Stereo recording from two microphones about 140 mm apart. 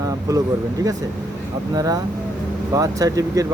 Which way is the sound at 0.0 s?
25° right (ahead or behind).